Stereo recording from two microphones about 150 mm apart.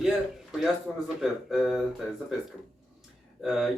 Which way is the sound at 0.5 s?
Centre (ahead or behind).